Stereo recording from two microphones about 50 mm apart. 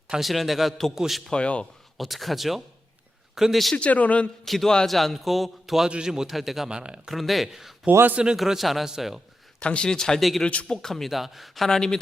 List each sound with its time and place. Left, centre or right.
0.2 s a man's voice: centre
1.3 s a man's voice: left
2.0 s a man's voice: centre
3.8 s a man's voice: left
4.4 s a man's voice: centre
6.7 s speech: centre
7.1 s a man's voice: centre
8.4 s a man's voice: centre
9.6 s a man's voice: left
10.2 s a man's voice: centre
10.4 s a man's voice: centre
10.8 s a man's voice: centre
11.1 s a man's voice: centre